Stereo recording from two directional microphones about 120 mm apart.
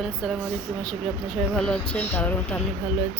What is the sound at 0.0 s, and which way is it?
Speech, centre (ahead or behind).